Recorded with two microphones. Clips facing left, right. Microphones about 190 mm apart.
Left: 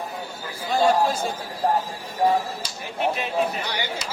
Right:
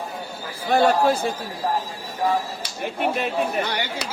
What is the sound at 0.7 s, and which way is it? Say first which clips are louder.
Speech: right 2 dB; 65° right (ahead or behind).